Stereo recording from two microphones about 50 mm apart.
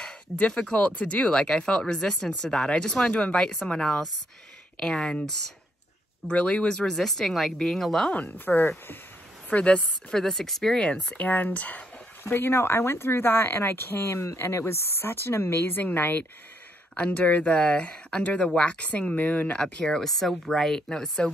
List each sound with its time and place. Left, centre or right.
0.0 s speech: centre
3.8 s speech: centre
6.2 s speech: left
6.9 s speech: centre
8.1 s speech: left
8.5 s speech: left
9.5 s speech: left
10.1 s speech: centre
11.1 s speech: left
12.2 s speech: left
15.8 s speech: left
16.9 s speech: left
19.6 s speech: centre